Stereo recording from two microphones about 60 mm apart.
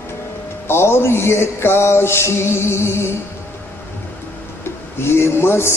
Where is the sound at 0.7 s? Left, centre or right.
Left.